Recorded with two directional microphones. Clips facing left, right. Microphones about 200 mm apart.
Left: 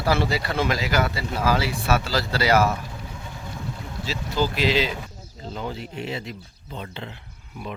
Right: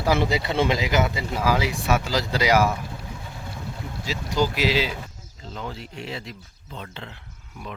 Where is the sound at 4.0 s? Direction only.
15° right (ahead or behind).